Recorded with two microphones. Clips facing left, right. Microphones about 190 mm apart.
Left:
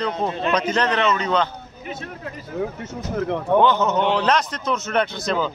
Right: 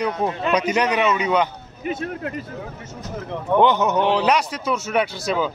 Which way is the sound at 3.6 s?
15° right (ahead or behind).